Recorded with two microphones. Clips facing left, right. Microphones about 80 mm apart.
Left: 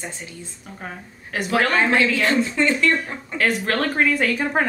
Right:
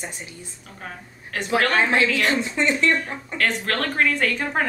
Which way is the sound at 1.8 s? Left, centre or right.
Centre.